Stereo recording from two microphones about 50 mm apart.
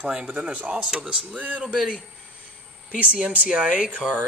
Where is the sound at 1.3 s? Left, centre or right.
Right.